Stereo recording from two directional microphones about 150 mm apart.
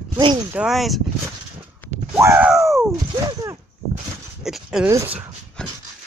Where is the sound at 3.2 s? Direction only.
25° right (ahead or behind).